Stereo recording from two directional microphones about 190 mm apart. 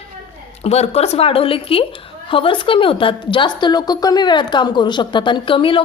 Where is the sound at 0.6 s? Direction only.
35° left (ahead or behind).